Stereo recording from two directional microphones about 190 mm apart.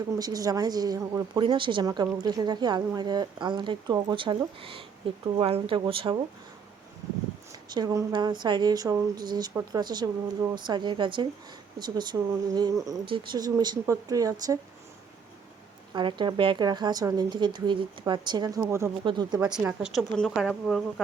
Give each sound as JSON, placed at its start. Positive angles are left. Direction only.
{"t": 0.2, "sound": "a woman's voice", "side_deg": -20}
{"t": 7.7, "sound": "a woman's voice", "side_deg": -20}
{"t": 16.0, "sound": "a woman's voice", "side_deg": -25}
{"t": 19.4, "sound": "a woman's voice", "side_deg": -5}